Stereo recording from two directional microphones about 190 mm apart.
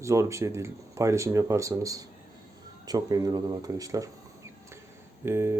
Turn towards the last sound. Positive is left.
turn(degrees=-15)  # may be behind; listen again after turning